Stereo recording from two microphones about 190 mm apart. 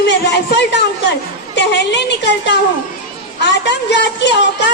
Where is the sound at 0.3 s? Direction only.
65° left (ahead or behind).